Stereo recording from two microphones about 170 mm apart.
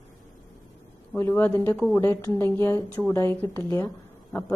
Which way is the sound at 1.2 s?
10° left (ahead or behind).